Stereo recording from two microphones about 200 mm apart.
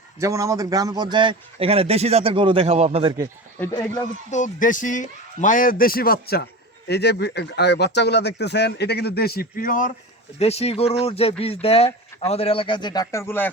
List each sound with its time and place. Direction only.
0.2 s a man's voice: 15° right (ahead or behind)
3.6 s speech: 15° left (ahead or behind)
4.3 s a man's voice: 40° left (ahead or behind)
10.3 s speech: 30° left (ahead or behind); by 13.5 s 10° left (ahead or behind)